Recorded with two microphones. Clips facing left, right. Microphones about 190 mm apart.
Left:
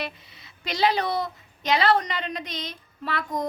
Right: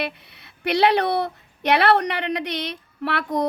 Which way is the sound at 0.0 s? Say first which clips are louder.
Right 5 dB; 65° right (ahead or behind).